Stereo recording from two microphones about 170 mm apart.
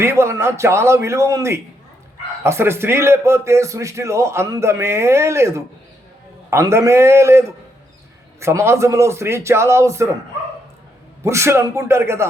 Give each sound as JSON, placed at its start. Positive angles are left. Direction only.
{"t": 0.0, "sound": "a man's voice", "side_deg": -15}
{"t": 11.2, "sound": "a man's voice", "side_deg": -15}